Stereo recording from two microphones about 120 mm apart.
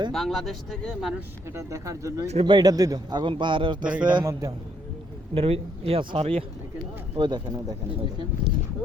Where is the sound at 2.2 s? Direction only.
65° right (ahead or behind).